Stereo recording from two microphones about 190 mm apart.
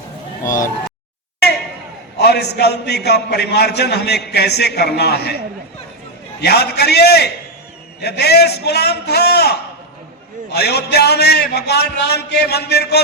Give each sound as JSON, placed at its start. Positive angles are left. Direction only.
{"t": 2.1, "sound": "a man's voice", "side_deg": 60}
{"t": 6.4, "sound": "a man's voice", "side_deg": 60}